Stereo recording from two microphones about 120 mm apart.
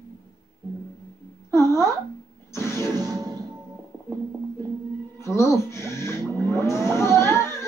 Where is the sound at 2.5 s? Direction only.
20° left (ahead or behind).